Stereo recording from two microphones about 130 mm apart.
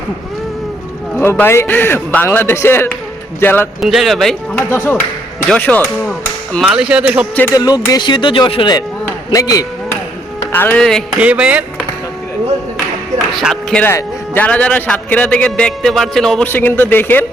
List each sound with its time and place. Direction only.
1.2 s a man's voice: 15° left (ahead or behind)
3.8 s speech: centre (ahead or behind)
4.5 s a man's voice: 20° left (ahead or behind)
6.6 s speech: 5° right (ahead or behind)
7.5 s speech: 30° left (ahead or behind)
9.3 s speech: 25° left (ahead or behind)
10.5 s a man's voice: 15° left (ahead or behind)
11.2 s speech: 10° right (ahead or behind)
13.3 s speech: centre (ahead or behind)
13.7 s a man's voice: 15° left (ahead or behind)
16.5 s a man's voice: 15° left (ahead or behind)